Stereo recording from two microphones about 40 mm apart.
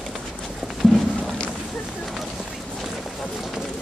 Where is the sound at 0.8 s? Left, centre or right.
Centre.